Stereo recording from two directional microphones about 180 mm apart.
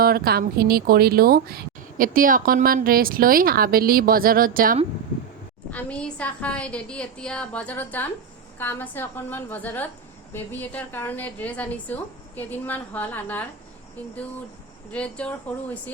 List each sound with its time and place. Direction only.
0.0 s speech: 55° right (ahead or behind)
5.7 s a woman's voice: 5° left (ahead or behind)
14.9 s a woman's voice: 5° left (ahead or behind)